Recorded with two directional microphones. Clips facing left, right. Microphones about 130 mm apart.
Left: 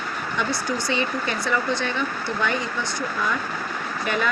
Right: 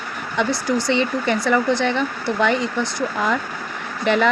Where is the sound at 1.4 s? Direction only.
75° right (ahead or behind).